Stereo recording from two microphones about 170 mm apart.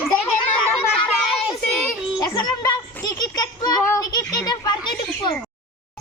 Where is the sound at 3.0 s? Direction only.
25° left (ahead or behind).